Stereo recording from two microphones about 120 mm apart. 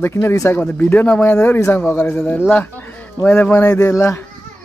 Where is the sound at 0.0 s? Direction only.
20° left (ahead or behind).